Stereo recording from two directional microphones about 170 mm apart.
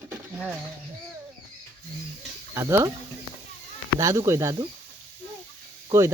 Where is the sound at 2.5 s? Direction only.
15° right (ahead or behind).